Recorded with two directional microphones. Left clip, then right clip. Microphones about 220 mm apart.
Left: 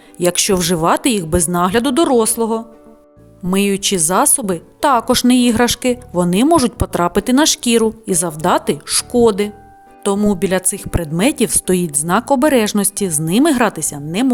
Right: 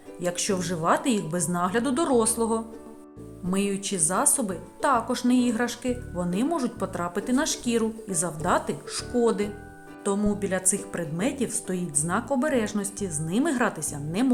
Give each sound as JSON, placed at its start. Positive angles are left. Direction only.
{"t": 0.2, "sound": "a woman's voice", "side_deg": 45}
{"t": 3.5, "sound": "a woman's voice", "side_deg": 45}